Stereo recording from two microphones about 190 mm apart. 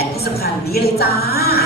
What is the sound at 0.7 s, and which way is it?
Speech, 55° left (ahead or behind).